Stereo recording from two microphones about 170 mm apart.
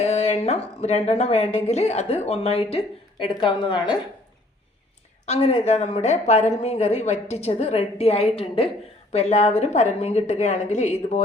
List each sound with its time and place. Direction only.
0.0 s a woman's voice: 40° left (ahead or behind)
5.2 s a woman's voice: 35° left (ahead or behind)